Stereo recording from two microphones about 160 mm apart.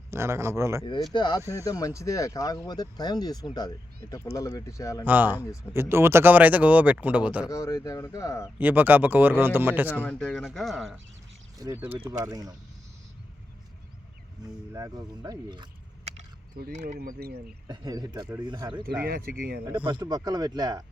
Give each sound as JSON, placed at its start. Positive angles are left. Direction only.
{"t": 0.1, "sound": "speech", "side_deg": -15}
{"t": 1.1, "sound": "speech", "side_deg": 25}
{"t": 5.0, "sound": "speech", "side_deg": -10}
{"t": 7.5, "sound": "speech", "side_deg": 20}
{"t": 8.5, "sound": "speech", "side_deg": -10}
{"t": 9.9, "sound": "speech", "side_deg": 5}
{"t": 11.5, "sound": "speech", "side_deg": -20}
{"t": 14.7, "sound": "speech", "side_deg": -20}
{"t": 16.8, "sound": "speech", "side_deg": -60}
{"t": 17.7, "sound": "speech", "side_deg": -25}
{"t": 19.0, "sound": "speech", "side_deg": -65}
{"t": 19.8, "sound": "speech", "side_deg": -25}